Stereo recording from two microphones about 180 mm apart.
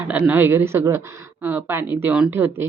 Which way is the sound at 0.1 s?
10° right (ahead or behind).